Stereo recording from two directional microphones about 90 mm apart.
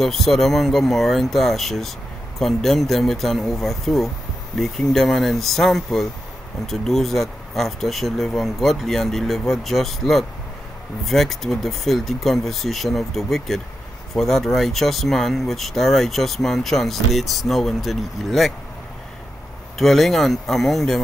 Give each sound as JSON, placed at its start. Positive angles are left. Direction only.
{"t": 0.0, "sound": "speech", "side_deg": 5}
{"t": 19.8, "sound": "speech", "side_deg": 0}